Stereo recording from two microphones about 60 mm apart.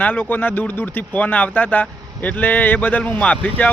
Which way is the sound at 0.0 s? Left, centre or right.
Left.